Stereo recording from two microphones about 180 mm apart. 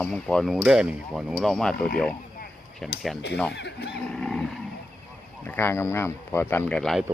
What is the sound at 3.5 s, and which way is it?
Speech, 65° left (ahead or behind).